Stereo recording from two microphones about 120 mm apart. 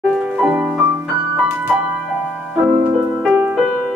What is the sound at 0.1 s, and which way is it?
Music, 5° right (ahead or behind).